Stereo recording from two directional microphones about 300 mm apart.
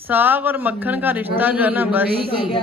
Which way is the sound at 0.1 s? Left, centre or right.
Centre.